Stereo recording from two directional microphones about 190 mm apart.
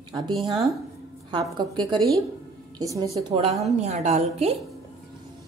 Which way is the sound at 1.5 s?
25° right (ahead or behind).